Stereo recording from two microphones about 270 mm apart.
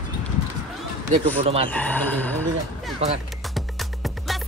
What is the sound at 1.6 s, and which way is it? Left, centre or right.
Speech, centre.